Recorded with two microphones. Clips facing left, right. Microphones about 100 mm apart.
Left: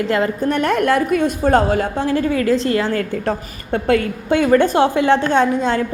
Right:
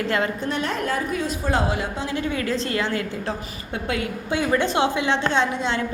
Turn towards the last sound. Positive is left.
turn(degrees=45)  # may be behind; listen again after turning